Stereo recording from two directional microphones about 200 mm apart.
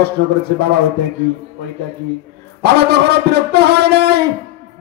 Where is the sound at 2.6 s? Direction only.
55° right (ahead or behind).